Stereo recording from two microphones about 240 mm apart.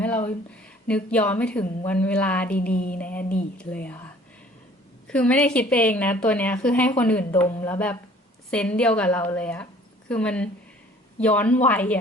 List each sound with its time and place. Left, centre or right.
0.9 s a woman's voice: centre
2.7 s mantra: left
3.0 s a woman's voice: centre
5.0 s a woman's voice: centre